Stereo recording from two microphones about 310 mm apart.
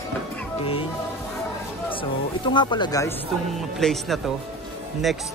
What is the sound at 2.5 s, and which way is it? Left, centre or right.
Speech, centre.